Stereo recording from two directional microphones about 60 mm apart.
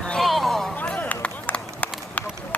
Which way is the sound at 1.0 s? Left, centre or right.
Left.